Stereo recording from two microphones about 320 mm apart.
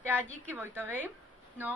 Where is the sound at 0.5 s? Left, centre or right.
Centre.